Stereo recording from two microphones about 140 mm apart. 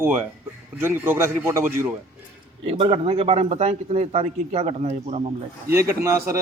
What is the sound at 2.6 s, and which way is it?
A man's voice, 40° right (ahead or behind).